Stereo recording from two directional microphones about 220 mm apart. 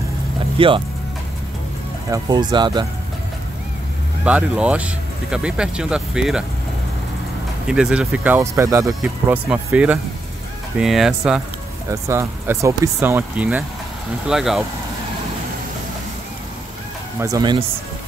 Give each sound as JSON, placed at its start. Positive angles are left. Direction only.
{"t": 0.6, "sound": "speech", "side_deg": -25}
{"t": 2.0, "sound": "speech", "side_deg": -15}
{"t": 4.2, "sound": "speech", "side_deg": -5}
{"t": 7.6, "sound": "speech", "side_deg": -5}
{"t": 17.2, "sound": "speech", "side_deg": -15}